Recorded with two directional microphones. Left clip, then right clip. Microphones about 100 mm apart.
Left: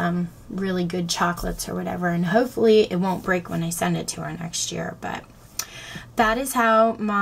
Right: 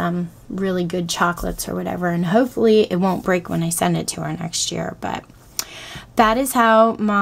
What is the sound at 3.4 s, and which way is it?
Speech, 45° right (ahead or behind).